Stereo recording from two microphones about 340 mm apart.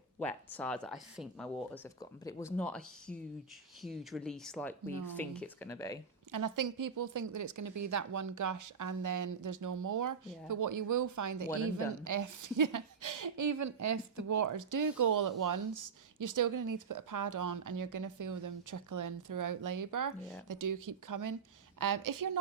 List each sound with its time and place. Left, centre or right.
0.2 s speech: centre
6.3 s a woman's voice: right